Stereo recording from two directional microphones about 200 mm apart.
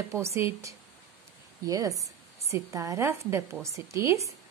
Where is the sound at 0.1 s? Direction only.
15° right (ahead or behind).